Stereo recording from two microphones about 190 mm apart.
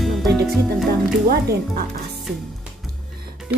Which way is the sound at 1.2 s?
55° right (ahead or behind).